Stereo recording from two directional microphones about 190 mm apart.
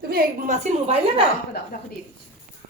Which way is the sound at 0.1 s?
40° right (ahead or behind).